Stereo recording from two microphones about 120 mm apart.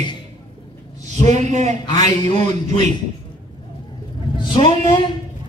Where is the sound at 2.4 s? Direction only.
70° right (ahead or behind).